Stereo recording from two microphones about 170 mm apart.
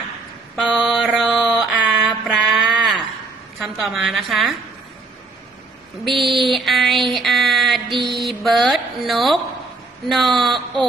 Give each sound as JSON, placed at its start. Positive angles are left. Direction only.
{"t": 0.5, "sound": "mantra", "side_deg": 5}
{"t": 2.4, "sound": "a sound", "side_deg": -5}
{"t": 3.6, "sound": "a woman's voice", "side_deg": 0}
{"t": 6.1, "sound": "a sound", "side_deg": 0}
{"t": 7.9, "sound": "mantra", "side_deg": -30}
{"t": 8.1, "sound": "mantra", "side_deg": 0}
{"t": 10.1, "sound": "a woman's voice", "side_deg": 0}